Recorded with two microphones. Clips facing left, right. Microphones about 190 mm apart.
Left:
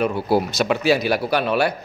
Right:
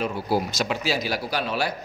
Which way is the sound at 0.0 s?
60° left (ahead or behind).